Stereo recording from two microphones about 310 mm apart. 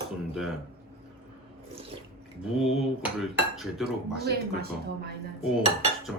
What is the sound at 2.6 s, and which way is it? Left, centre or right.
Dishes, centre.